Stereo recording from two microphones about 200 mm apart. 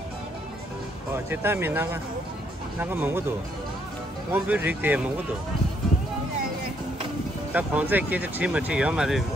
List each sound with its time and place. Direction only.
1.1 s speech: 10° right (ahead or behind)
7.5 s speech: 10° right (ahead or behind)